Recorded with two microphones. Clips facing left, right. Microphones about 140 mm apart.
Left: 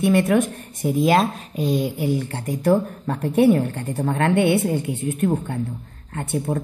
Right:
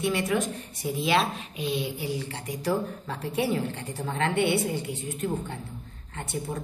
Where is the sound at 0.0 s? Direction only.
55° left (ahead or behind).